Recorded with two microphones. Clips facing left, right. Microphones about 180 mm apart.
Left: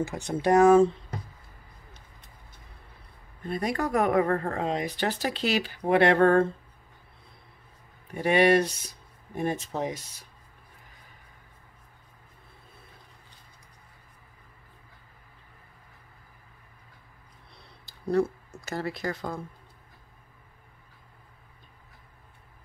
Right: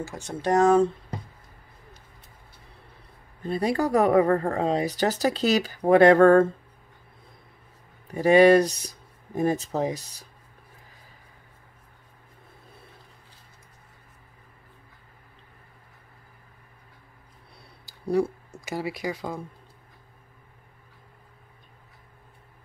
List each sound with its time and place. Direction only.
0.3 s speech: 10° left (ahead or behind)
3.4 s speech: 30° right (ahead or behind)
8.1 s speech: 35° right (ahead or behind)
17.6 s a sound: 10° right (ahead or behind)